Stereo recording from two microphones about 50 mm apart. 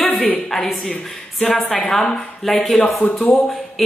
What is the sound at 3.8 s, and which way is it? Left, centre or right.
Music, centre.